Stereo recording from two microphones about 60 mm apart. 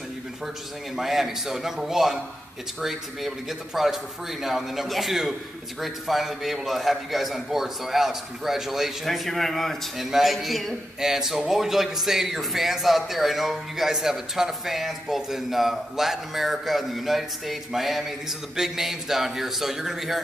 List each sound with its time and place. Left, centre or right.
0.9 s a man's voice: centre